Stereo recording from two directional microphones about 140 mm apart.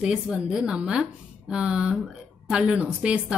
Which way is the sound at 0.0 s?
5° right (ahead or behind).